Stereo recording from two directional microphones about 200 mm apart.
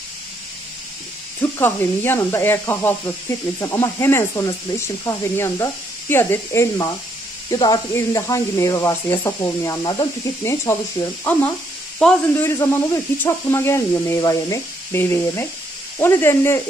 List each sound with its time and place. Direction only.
1.4 s speech: 10° left (ahead or behind)